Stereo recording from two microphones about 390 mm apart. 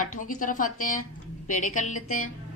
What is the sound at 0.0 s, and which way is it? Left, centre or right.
A woman's voice, centre.